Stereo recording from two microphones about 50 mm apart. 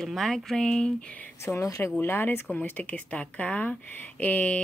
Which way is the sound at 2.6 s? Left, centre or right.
Left.